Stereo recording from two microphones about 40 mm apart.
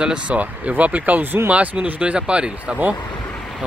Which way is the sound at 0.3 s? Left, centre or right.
Right.